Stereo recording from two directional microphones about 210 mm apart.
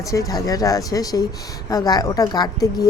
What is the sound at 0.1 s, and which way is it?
Speech, 15° left (ahead or behind).